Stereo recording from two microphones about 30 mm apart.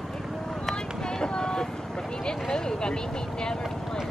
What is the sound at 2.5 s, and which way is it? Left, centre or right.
Speech, left.